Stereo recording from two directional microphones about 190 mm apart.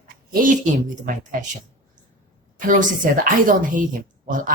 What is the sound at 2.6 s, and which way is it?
Speech, 45° right (ahead or behind).